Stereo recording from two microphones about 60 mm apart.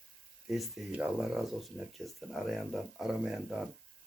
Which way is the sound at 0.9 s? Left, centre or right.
Right.